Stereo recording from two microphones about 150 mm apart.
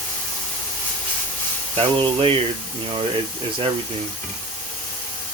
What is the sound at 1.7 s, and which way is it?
Speech, 35° right (ahead or behind).